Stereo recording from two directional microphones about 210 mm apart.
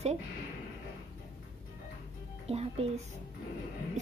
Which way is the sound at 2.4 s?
30° right (ahead or behind).